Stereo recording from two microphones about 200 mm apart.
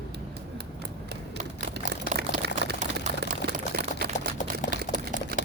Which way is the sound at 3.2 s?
50° right (ahead or behind).